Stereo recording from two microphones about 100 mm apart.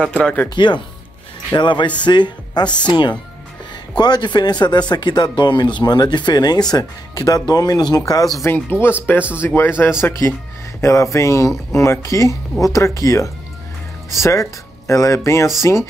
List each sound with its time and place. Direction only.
0.0 s speech: 10° left (ahead or behind)
0.6 s speech: 50° left (ahead or behind)
8.5 s speech: 20° left (ahead or behind)